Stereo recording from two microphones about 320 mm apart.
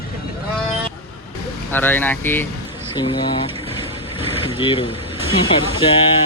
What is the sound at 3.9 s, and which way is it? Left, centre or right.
Vehicle, centre.